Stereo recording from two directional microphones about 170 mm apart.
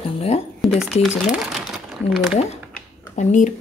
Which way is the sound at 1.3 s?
Centre (ahead or behind).